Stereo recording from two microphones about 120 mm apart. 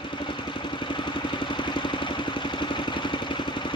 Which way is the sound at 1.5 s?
40° left (ahead or behind).